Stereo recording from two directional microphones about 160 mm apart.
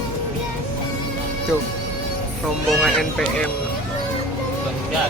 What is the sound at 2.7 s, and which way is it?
Speech, centre (ahead or behind).